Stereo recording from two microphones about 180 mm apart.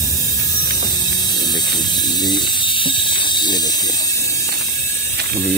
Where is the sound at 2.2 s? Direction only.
25° left (ahead or behind).